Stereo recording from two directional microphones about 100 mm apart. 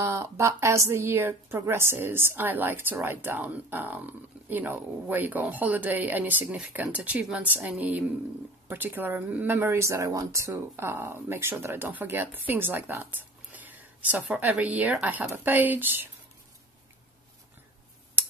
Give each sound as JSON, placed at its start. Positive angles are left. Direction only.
{"t": 0.0, "sound": "a woman's voice", "side_deg": -30}
{"t": 8.6, "sound": "a woman's voice", "side_deg": -20}